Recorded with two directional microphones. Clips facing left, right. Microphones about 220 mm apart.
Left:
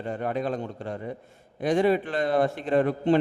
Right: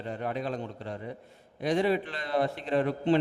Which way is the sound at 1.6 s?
50° left (ahead or behind).